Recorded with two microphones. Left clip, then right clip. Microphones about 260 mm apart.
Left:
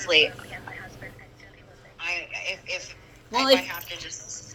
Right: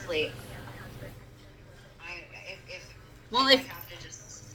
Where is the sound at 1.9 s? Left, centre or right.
Left.